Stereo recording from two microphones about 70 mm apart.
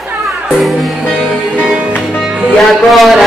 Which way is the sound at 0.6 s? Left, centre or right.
Centre.